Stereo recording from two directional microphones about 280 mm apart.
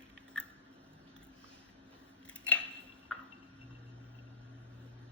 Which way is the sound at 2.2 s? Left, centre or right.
Centre.